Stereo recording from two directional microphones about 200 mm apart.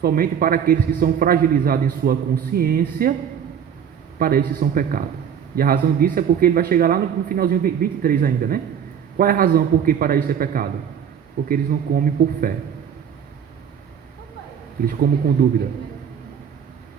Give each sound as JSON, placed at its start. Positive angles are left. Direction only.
{"t": 0.0, "sound": "a man's voice", "side_deg": -45}
{"t": 4.2, "sound": "a man's voice", "side_deg": -45}
{"t": 15.4, "sound": "a man's voice", "side_deg": -50}